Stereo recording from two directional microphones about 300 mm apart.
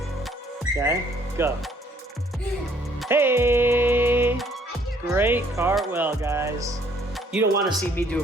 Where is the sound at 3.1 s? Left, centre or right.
Centre.